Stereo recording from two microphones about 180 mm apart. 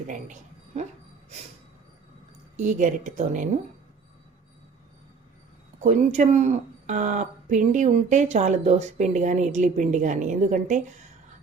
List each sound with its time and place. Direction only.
0.1 s speech: 40° right (ahead or behind)
2.6 s speech: 45° right (ahead or behind)
5.8 s speech: 40° right (ahead or behind)